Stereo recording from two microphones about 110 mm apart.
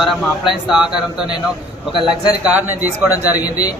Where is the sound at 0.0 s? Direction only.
Centre (ahead or behind).